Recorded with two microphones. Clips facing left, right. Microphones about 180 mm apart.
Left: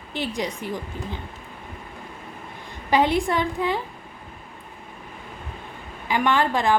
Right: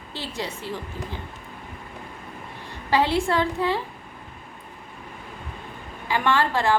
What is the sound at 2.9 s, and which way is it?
Speech, 15° left (ahead or behind).